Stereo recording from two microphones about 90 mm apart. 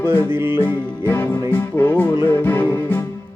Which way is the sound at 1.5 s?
25° left (ahead or behind).